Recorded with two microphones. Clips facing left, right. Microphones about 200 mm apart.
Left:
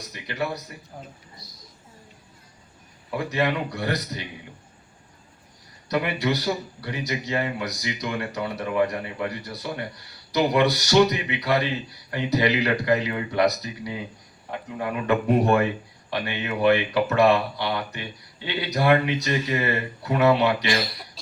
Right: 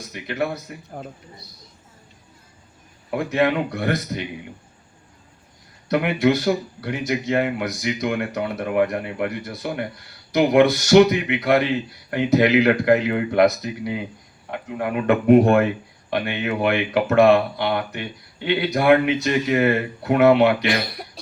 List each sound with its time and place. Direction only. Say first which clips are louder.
0.1 s speech: right 4 dB; 50° right (ahead or behind)
3.2 s speech: right 5 dB; 50° right (ahead or behind)
5.9 s speech: right 6 dB; 55° right (ahead or behind)
14.9 s speech: right 7 dB; 55° right (ahead or behind)